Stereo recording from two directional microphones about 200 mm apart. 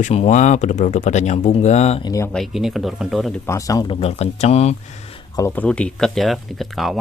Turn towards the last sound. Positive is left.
turn(degrees=0)  # may be behind; listen again after turning